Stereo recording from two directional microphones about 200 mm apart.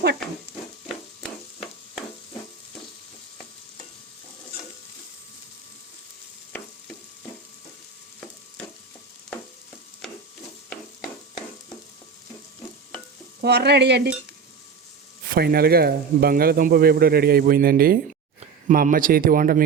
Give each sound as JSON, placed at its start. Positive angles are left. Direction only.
{"t": 1.2, "sound": "chop", "side_deg": 0}
{"t": 13.4, "sound": "frying", "side_deg": -55}
{"t": 15.3, "sound": "a man's voice", "side_deg": -50}